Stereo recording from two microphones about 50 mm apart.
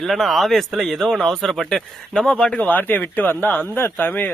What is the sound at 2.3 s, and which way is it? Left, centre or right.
Speech, left.